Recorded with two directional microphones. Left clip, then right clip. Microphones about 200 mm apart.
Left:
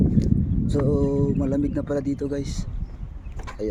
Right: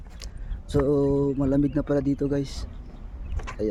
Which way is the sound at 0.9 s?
10° right (ahead or behind).